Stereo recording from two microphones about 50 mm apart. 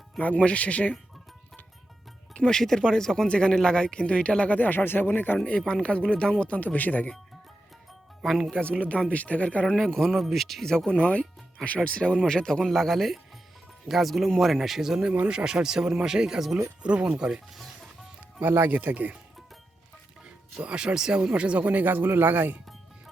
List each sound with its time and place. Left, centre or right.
0.2 s speech: left
2.5 s speech: centre
4.5 s speech: left
5.5 s speech: centre; by 7.1 s left
8.2 s speech: centre
9.0 s speech: left
9.6 s speech: centre
11.0 s speech: left; by 16.6 s centre
16.8 s speech: right
18.3 s speech: right
20.2 s speech: right